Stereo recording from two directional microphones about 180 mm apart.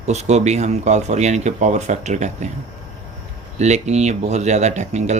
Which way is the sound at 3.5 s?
40° right (ahead or behind).